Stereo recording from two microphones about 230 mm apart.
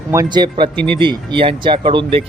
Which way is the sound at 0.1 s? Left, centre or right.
Centre.